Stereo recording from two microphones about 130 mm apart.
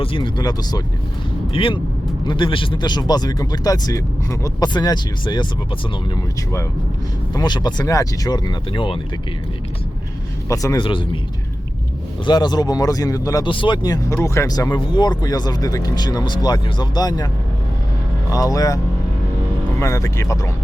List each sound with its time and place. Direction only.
0.0 s speech: 40° left (ahead or behind)
7.3 s speech: 35° left (ahead or behind)
10.5 s speech: 25° left (ahead or behind)
10.8 s speech: 40° left (ahead or behind)
12.2 s speech: 35° left (ahead or behind)
13.5 s speech: 40° left (ahead or behind)
18.3 s speech: 25° left (ahead or behind)
19.8 s speech: 25° left (ahead or behind)